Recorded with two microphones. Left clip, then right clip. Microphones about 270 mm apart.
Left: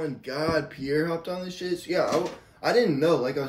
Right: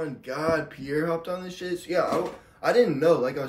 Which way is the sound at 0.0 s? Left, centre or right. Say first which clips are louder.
Even; centre.